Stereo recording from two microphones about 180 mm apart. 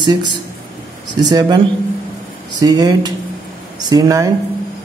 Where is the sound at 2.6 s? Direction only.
20° right (ahead or behind).